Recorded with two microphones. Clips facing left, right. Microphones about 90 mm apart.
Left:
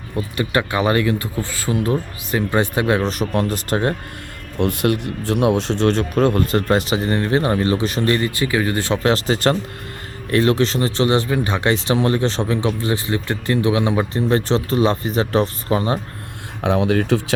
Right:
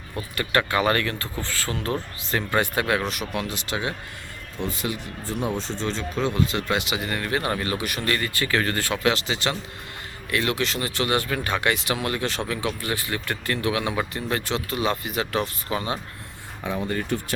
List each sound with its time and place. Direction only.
0.2 s speech: 20° left (ahead or behind); by 3.9 s 45° left (ahead or behind)
4.5 s speech: 65° left (ahead or behind); by 9.0 s 20° left (ahead or behind)
9.0 s speech: 40° left (ahead or behind)
16.6 s speech: 75° left (ahead or behind); by 17.3 s 90° left